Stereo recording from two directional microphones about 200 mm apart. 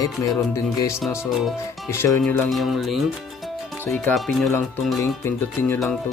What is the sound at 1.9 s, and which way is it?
Speech, 15° left (ahead or behind).